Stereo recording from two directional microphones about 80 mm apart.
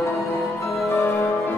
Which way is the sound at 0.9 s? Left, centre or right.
Left.